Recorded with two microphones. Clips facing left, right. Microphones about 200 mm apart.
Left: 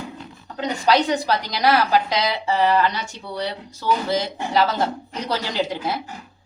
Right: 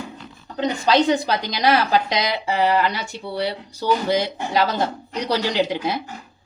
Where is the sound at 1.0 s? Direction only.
20° right (ahead or behind).